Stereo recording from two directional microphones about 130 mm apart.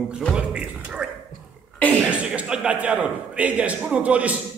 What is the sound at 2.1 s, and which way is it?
A man's voice, 10° right (ahead or behind).